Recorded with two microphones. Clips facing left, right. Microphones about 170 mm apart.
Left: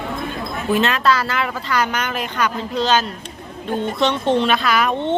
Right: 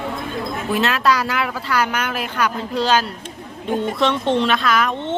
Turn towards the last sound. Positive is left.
turn(degrees=5)  # may be behind; listen again after turning